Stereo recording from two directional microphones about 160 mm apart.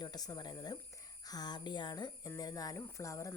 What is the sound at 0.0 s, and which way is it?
Speech, 25° left (ahead or behind).